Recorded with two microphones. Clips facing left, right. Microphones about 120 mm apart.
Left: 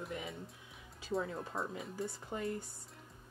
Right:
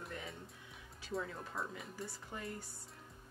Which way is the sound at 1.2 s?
25° left (ahead or behind).